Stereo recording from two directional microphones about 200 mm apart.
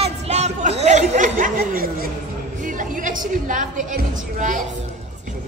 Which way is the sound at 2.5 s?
40° right (ahead or behind).